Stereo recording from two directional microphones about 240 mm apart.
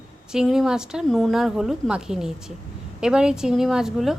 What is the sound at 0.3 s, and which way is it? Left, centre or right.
A woman's voice, centre.